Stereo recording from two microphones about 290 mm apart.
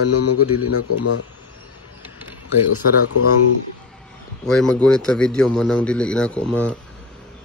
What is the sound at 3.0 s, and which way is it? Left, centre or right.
Speech, left.